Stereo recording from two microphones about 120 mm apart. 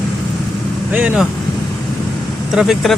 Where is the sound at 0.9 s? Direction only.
10° right (ahead or behind).